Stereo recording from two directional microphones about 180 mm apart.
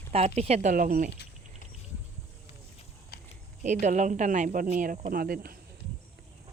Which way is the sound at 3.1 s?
60° left (ahead or behind).